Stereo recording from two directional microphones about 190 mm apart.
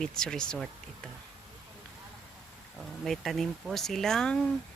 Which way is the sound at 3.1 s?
Centre (ahead or behind).